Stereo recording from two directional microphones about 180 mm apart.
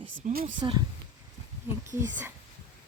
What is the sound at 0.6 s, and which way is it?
Speech, 25° right (ahead or behind).